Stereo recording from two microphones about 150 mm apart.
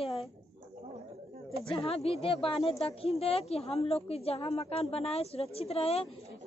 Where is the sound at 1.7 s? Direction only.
40° left (ahead or behind).